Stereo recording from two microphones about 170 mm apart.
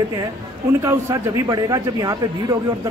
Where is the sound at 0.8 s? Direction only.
20° right (ahead or behind).